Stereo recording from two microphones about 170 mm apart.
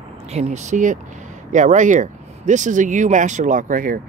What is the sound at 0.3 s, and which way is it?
Speech, 40° right (ahead or behind).